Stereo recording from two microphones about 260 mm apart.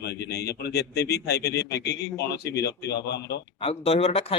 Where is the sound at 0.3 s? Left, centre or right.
Left.